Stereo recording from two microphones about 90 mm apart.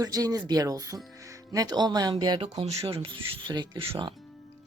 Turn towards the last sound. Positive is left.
turn(degrees=-60)  # may be behind; listen again after turning